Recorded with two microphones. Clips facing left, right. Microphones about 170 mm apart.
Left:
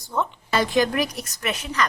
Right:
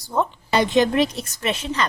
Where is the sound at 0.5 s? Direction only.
20° right (ahead or behind).